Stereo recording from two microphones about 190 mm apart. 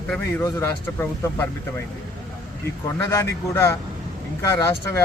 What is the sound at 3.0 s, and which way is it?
A man's voice, 15° left (ahead or behind).